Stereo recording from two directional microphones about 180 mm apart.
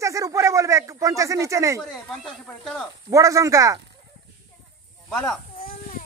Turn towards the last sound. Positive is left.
turn(degrees=5)  # may be behind; listen again after turning